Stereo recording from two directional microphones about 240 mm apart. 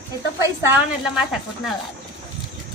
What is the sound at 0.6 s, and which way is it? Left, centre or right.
Speech, centre.